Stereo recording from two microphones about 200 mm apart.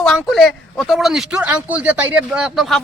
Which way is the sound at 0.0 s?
Centre (ahead or behind).